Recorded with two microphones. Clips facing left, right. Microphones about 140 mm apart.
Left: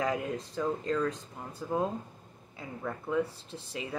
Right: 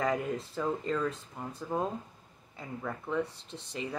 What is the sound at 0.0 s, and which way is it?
Speech, centre (ahead or behind).